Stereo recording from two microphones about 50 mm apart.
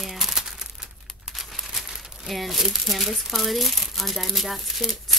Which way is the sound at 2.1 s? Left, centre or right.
Centre.